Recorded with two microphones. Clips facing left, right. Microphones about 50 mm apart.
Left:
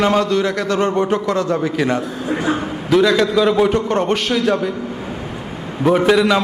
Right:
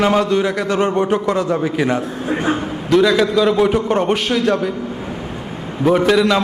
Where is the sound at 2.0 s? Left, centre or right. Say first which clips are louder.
Right 1 dB; right.